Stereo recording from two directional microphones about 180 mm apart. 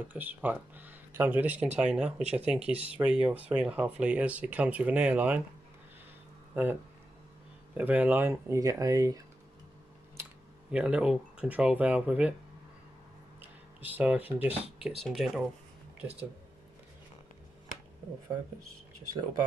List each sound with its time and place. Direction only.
0.1 s speech: 10° right (ahead or behind)
6.5 s speech: 10° right (ahead or behind)
10.7 s speech: 5° right (ahead or behind)
13.7 s speech: 10° right (ahead or behind)